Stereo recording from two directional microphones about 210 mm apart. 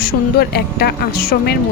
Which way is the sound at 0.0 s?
45° left (ahead or behind).